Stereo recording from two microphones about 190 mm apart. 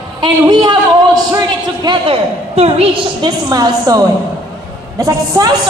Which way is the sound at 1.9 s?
30° right (ahead or behind).